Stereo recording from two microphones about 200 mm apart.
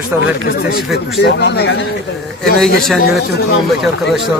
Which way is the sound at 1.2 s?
60° left (ahead or behind).